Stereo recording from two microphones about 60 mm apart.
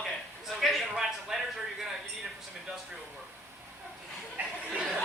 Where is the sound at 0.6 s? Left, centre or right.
Centre.